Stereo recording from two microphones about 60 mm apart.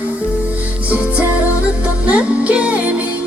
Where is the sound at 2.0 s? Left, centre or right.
Right.